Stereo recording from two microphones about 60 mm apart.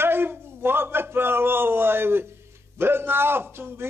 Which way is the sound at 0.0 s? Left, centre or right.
Right.